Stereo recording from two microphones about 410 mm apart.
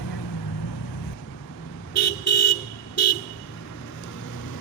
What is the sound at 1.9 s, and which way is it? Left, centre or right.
Vehicle, left.